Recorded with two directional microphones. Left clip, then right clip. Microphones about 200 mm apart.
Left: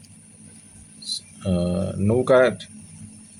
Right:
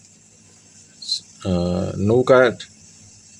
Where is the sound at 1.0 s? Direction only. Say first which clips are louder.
Right 4 dB; 25° right (ahead or behind).